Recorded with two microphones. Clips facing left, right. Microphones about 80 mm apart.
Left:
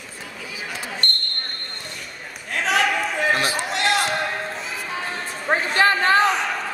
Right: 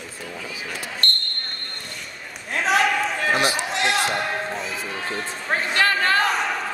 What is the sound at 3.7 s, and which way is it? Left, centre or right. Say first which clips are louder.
Basketball bounce: left 4 dB; centre.